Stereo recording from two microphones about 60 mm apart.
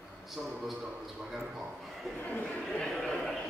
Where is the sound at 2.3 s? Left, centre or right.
Left.